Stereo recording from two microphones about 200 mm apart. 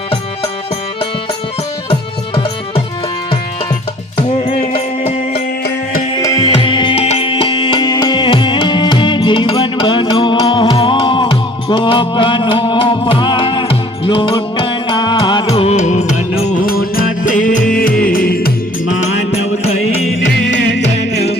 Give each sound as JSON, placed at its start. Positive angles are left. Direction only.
{"t": 1.9, "sound": "music", "side_deg": 25}
{"t": 4.4, "sound": "music", "side_deg": 35}
{"t": 5.3, "sound": "music", "side_deg": 55}
{"t": 6.1, "sound": "music", "side_deg": 20}
{"t": 16.6, "sound": "music", "side_deg": 45}
{"t": 20.0, "sound": "music", "side_deg": 0}
{"t": 20.2, "sound": "music", "side_deg": 60}